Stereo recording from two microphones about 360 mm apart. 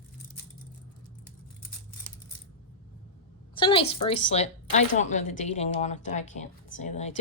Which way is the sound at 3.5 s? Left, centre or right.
Centre.